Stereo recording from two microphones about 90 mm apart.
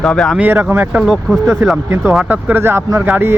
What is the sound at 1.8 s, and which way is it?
Speech, 30° right (ahead or behind).